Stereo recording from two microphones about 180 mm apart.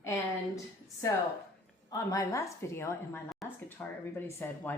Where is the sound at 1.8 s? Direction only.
20° left (ahead or behind).